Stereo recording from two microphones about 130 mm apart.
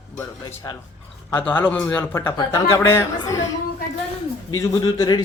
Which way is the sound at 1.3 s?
15° left (ahead or behind).